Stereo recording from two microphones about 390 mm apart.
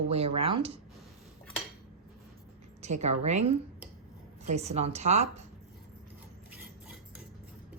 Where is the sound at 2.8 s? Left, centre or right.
Centre.